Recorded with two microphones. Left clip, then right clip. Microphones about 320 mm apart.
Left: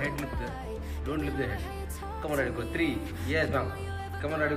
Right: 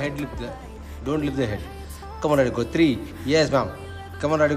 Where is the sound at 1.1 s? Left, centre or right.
Centre.